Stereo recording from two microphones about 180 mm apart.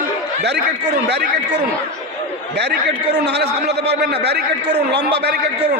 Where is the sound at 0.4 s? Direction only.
70° right (ahead or behind).